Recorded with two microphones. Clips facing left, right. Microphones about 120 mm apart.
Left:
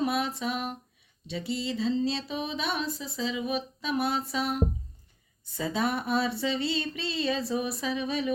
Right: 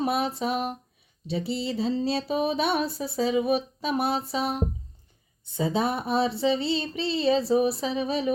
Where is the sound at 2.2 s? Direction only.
50° right (ahead or behind).